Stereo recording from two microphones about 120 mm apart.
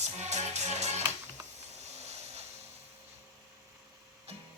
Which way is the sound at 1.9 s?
65° right (ahead or behind).